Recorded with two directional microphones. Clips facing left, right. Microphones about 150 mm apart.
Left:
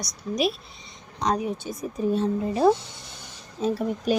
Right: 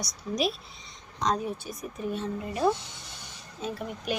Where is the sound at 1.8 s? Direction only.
35° left (ahead or behind).